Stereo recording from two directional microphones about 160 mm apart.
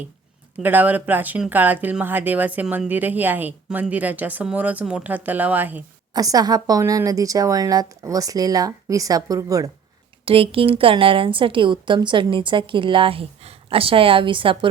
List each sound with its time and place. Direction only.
0.6 s speech: 10° right (ahead or behind)
6.1 s a woman's voice: 25° right (ahead or behind)
10.2 s a woman's voice: 35° right (ahead or behind)